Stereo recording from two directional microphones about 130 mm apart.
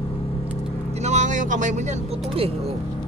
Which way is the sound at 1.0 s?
65° right (ahead or behind).